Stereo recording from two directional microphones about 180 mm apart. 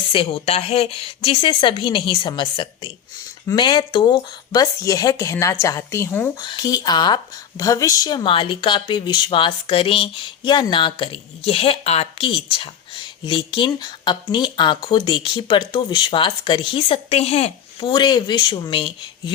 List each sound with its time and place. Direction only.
0.1 s speech: 30° left (ahead or behind); by 6.3 s 10° left (ahead or behind)
6.4 s speech: 25° left (ahead or behind)